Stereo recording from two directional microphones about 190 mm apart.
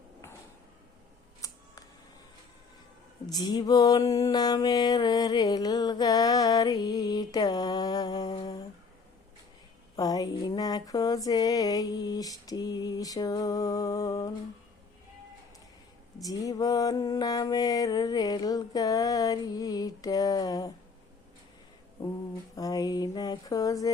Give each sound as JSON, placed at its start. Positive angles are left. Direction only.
{"t": 1.4, "sound": "camera", "side_deg": 15}
{"t": 3.2, "sound": "mantra", "side_deg": 20}
{"t": 9.9, "sound": "a sound", "side_deg": 20}
{"t": 16.1, "sound": "mantra", "side_deg": 20}
{"t": 22.5, "sound": "mantra", "side_deg": 20}